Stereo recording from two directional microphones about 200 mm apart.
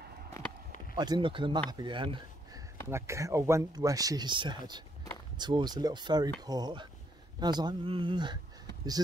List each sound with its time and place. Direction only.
0.9 s speech: 20° right (ahead or behind)